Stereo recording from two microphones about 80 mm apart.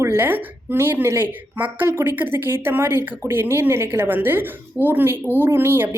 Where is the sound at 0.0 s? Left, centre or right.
Right.